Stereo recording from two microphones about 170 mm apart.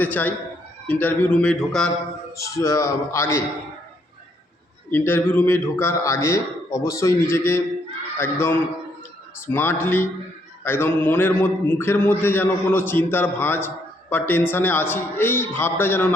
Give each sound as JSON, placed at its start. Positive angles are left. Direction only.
{"t": 0.0, "sound": "a man's voice", "side_deg": 10}
{"t": 2.3, "sound": "a man's voice", "side_deg": 20}
{"t": 4.9, "sound": "a man's voice", "side_deg": 15}